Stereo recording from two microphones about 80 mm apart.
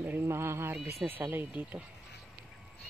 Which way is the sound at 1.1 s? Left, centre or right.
Right.